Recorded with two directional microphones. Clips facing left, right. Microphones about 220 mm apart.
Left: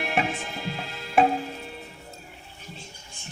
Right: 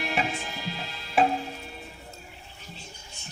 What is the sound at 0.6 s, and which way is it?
Tick-tock, 55° left (ahead or behind).